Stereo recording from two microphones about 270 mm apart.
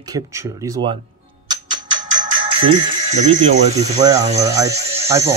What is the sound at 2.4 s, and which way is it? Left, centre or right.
Music, centre.